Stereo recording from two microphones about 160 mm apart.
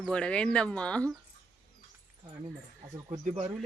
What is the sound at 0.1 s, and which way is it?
Speech, 5° left (ahead or behind).